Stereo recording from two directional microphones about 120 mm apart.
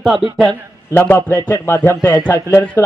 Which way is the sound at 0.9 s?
15° left (ahead or behind).